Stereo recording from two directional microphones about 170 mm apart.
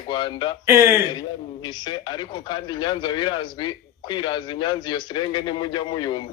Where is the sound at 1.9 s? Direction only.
25° left (ahead or behind).